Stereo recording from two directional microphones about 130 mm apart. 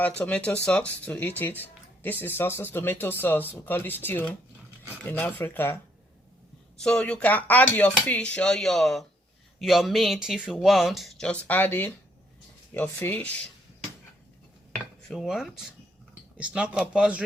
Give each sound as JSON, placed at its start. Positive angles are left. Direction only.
{"t": 0.2, "sound": "speech", "side_deg": 10}
{"t": 6.8, "sound": "speech", "side_deg": 5}
{"t": 15.0, "sound": "a man's voice", "side_deg": 0}